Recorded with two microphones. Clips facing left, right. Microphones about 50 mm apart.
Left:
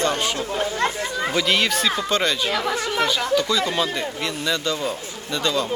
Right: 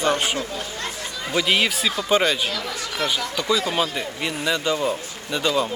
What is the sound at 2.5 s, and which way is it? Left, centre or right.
Speech, left.